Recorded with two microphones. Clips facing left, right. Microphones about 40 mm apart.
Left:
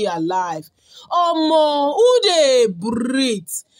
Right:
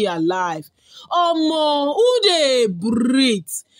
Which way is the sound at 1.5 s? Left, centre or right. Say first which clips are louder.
Left 2 dB; right.